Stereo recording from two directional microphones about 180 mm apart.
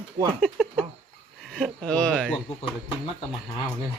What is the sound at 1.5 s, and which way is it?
Speech, 5° left (ahead or behind).